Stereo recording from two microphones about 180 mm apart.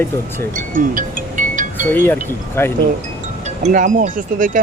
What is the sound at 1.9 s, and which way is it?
Speech, 10° left (ahead or behind).